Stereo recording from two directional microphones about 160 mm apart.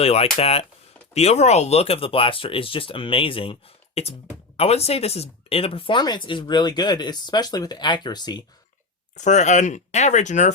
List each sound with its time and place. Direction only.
0.0 s speech: 40° left (ahead or behind)
9.1 s speech: 45° left (ahead or behind)